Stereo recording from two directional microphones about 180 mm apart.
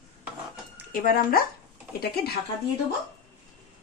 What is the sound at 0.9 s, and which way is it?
Speech, 50° left (ahead or behind).